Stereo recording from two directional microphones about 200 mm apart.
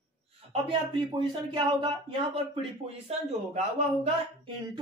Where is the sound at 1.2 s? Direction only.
25° right (ahead or behind).